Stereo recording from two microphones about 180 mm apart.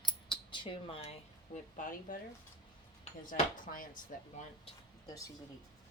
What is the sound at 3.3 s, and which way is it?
Speech, 50° left (ahead or behind).